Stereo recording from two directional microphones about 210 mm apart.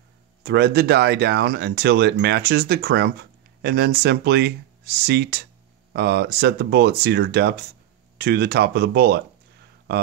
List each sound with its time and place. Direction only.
0.4 s speech: 50° right (ahead or behind)